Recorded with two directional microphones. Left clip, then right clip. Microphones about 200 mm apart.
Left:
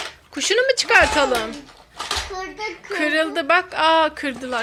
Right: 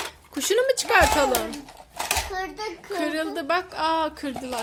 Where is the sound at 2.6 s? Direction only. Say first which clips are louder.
Left 5 dB; 5° right (ahead or behind).